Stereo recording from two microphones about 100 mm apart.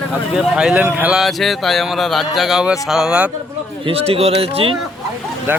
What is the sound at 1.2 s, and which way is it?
Speech, centre (ahead or behind).